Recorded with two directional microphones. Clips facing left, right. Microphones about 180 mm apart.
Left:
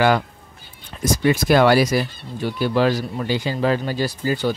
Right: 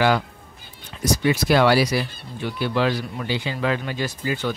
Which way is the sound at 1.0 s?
50° left (ahead or behind).